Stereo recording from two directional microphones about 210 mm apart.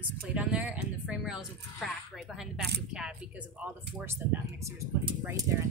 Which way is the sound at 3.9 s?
10° right (ahead or behind).